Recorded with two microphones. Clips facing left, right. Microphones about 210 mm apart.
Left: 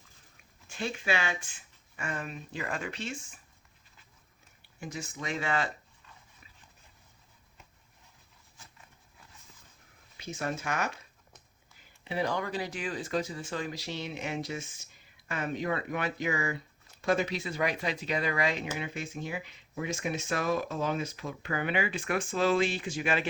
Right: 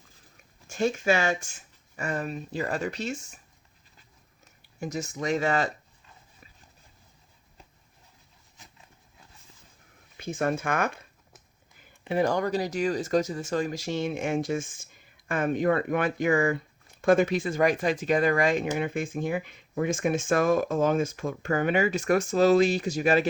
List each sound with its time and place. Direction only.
0.7 s speech: 45° right (ahead or behind)
4.8 s speech: 40° right (ahead or behind)
8.6 s a sound: 20° right (ahead or behind)
10.2 s speech: 50° right (ahead or behind)
12.0 s speech: 50° right (ahead or behind)